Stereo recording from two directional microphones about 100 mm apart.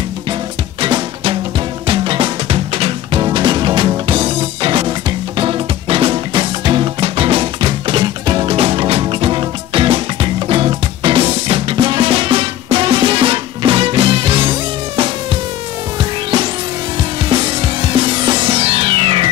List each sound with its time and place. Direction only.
0.7 s music: 55° right (ahead or behind); by 3.2 s 75° right (ahead or behind)
3.2 s music: 50° right (ahead or behind)
8.5 s music: 75° right (ahead or behind)
16.0 s music: 50° right (ahead or behind)